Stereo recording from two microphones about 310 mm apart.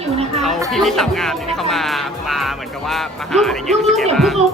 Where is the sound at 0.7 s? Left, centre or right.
Centre.